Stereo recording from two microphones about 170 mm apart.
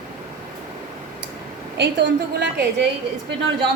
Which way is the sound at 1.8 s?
90° right.